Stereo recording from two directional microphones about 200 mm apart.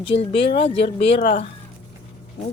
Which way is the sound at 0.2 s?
30° left (ahead or behind).